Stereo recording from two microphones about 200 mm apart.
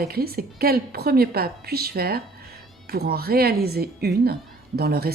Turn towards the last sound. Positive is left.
turn(degrees=-50)  # may be behind; listen again after turning